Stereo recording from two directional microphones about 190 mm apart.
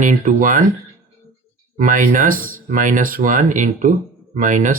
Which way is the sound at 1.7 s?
45° right (ahead or behind).